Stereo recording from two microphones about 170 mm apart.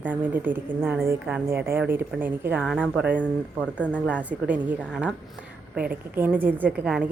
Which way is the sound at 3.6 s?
10° left (ahead or behind).